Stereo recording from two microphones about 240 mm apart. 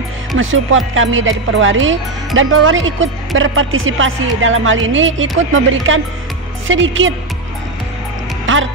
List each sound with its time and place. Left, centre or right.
0.4 s speech: right
8.5 s music: right